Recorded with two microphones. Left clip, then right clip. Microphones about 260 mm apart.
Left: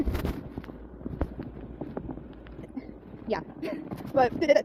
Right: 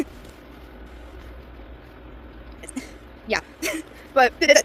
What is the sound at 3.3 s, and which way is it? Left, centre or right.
Speech, right.